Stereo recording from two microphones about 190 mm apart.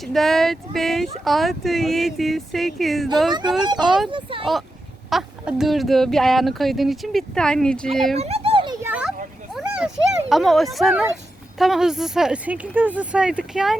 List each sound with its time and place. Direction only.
0.0 s speech: centre (ahead or behind)
4.1 s speech: 25° right (ahead or behind)
5.0 s speech: centre (ahead or behind)
8.1 s a sound: 35° right (ahead or behind)
8.8 s children playing: 5° right (ahead or behind)
9.6 s speech: 5° right (ahead or behind)